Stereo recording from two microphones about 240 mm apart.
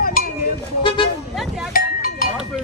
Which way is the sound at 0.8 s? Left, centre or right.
Left.